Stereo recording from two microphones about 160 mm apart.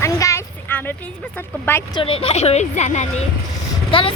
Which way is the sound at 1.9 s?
35° left (ahead or behind).